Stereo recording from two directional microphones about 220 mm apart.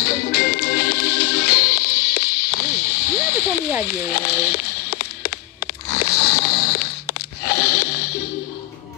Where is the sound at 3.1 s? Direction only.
10° right (ahead or behind).